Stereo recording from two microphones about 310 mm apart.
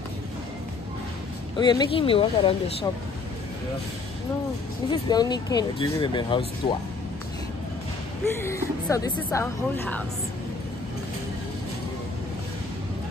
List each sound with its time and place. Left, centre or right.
1.6 s speech: centre
5.0 s speech: centre
8.4 s speech: centre